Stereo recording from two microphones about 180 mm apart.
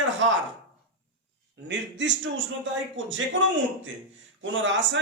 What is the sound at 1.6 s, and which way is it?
A man's voice, 80° right.